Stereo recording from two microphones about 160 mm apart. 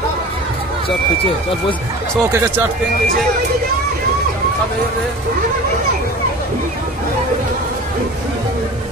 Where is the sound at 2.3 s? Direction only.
15° right (ahead or behind).